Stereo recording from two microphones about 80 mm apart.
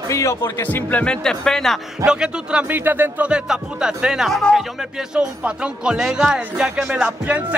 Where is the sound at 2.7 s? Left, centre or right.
Right.